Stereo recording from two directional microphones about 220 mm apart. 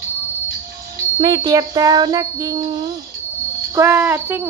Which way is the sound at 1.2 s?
15° right (ahead or behind).